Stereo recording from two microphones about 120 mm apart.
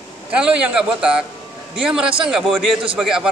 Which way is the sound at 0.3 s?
10° right (ahead or behind).